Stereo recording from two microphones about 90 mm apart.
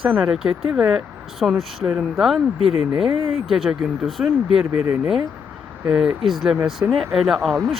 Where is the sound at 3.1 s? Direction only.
90° right.